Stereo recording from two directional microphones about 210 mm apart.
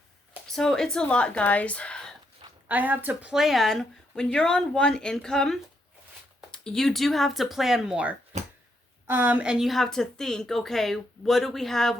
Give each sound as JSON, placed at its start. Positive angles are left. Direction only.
{"t": 0.4, "sound": "speech", "side_deg": 0}
{"t": 2.6, "sound": "speech", "side_deg": -10}
{"t": 8.3, "sound": "a sound", "side_deg": -35}
{"t": 9.0, "sound": "speech", "side_deg": -10}